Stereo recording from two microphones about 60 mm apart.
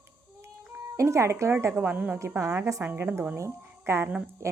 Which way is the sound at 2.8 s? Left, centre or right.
Right.